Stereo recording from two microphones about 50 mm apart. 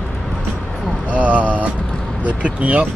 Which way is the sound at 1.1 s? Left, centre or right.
Right.